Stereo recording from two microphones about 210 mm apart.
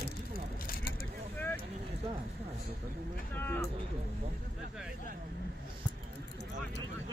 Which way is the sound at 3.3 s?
10° left (ahead or behind).